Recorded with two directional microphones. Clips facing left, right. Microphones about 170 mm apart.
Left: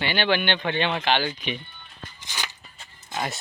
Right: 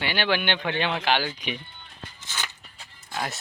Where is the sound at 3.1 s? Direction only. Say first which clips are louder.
Left 2 dB; centre (ahead or behind).